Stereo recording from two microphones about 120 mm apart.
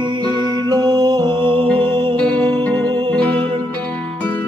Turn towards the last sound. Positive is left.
turn(degrees=10)  # may be behind; listen again after turning